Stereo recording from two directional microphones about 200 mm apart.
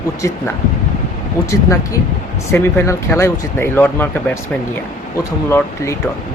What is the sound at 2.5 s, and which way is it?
Speech, 15° left (ahead or behind).